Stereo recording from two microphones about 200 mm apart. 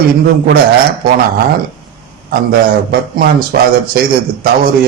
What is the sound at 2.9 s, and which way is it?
A man's voice, 50° right (ahead or behind).